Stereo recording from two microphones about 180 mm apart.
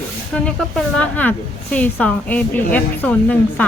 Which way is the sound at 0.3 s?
5° left (ahead or behind).